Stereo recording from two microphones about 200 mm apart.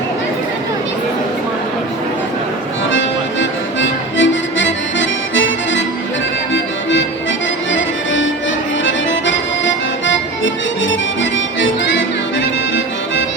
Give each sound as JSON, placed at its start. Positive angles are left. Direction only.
{"t": 3.8, "sound": "music", "side_deg": 70}
{"t": 7.7, "sound": "music", "side_deg": 70}
{"t": 8.8, "sound": "accordion", "side_deg": 70}